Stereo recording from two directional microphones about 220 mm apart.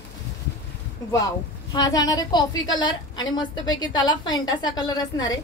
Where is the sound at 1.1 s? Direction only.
15° left (ahead or behind).